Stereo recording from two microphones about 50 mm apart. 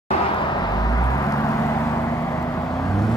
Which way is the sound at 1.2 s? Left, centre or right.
Left.